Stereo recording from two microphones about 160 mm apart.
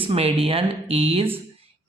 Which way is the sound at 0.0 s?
35° right (ahead or behind).